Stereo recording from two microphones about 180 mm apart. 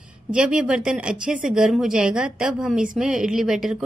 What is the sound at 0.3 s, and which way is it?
A woman's voice, 5° right (ahead or behind).